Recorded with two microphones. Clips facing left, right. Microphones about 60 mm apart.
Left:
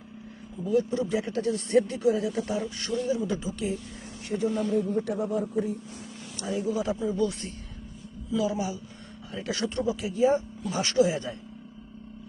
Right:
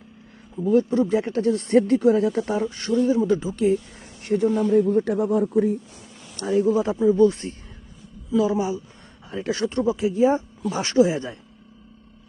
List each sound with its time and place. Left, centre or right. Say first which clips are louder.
0.6 s speech: right 6 dB; right
4.2 s speech: right 7 dB; right
4.7 s speech: right 8 dB; right
6.3 s speech: right 9 dB; right
6.8 s speech: right 10 dB; right